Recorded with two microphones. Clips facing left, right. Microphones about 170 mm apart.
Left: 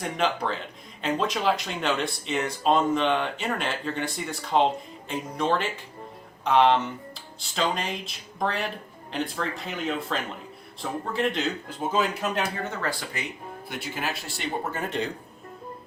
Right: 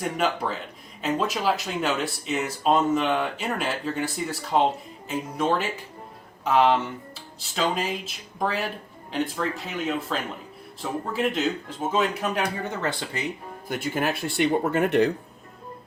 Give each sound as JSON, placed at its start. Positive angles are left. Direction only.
{"t": 0.0, "sound": "speech", "side_deg": -5}
{"t": 12.6, "sound": "speech", "side_deg": -20}
{"t": 13.7, "sound": "speech", "side_deg": -45}